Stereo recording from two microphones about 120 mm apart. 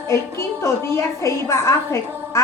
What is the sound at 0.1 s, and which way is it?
A woman's voice, 25° left (ahead or behind).